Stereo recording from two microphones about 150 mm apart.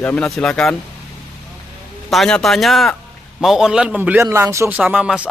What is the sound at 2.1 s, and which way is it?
A man's voice, centre (ahead or behind).